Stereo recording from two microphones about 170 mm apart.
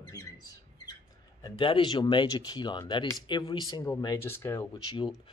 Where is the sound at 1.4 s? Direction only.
30° left (ahead or behind).